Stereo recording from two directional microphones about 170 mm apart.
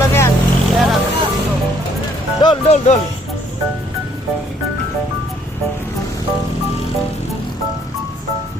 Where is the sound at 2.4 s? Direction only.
25° left (ahead or behind).